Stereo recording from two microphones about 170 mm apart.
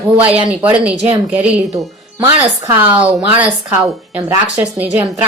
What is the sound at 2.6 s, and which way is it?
A woman's voice, 10° right (ahead or behind).